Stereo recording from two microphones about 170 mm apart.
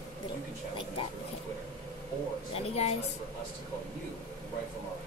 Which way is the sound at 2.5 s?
40° left (ahead or behind).